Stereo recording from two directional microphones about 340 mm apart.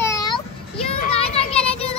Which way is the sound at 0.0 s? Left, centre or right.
Centre.